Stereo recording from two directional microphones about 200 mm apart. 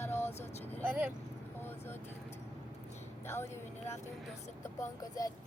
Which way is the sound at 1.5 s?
10° left (ahead or behind).